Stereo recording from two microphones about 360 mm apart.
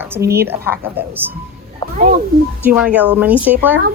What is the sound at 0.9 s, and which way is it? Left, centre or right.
Speech, centre.